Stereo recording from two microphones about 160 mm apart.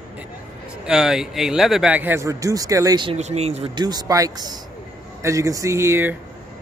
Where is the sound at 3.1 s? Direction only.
45° right (ahead or behind).